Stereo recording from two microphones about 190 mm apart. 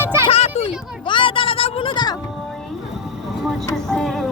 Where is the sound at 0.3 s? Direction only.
35° left (ahead or behind).